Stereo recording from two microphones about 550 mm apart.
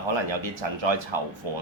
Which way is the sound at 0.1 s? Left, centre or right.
Right.